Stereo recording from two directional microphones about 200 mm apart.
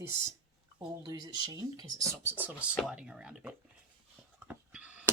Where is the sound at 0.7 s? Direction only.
20° right (ahead or behind).